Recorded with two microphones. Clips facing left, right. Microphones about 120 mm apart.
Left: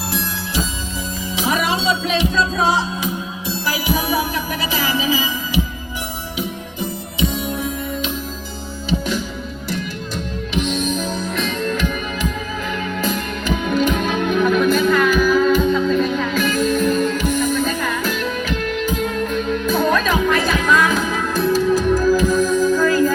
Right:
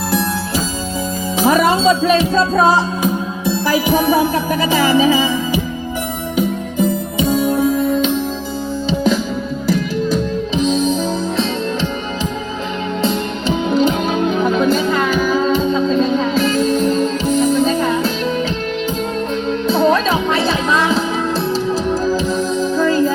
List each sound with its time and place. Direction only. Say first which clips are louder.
1.4 s music: right 7 dB; 45° right (ahead or behind)
6.3 s music: right 11 dB; 50° right (ahead or behind)
10.6 s music: right 5 dB; 35° right (ahead or behind)
13.0 s music: right 4 dB; 30° right (ahead or behind)
19.3 s music: right 2 dB; 30° right (ahead or behind)